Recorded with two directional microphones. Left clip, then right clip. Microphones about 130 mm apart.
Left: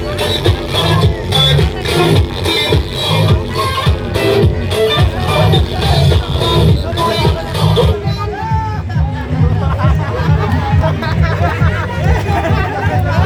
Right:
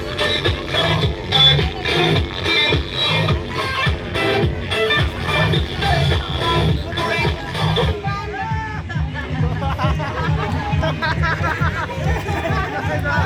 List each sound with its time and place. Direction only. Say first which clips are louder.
0.2 s music: left 2 dB; 20° left (ahead or behind)
11.0 s music: left 2 dB; 45° right (ahead or behind)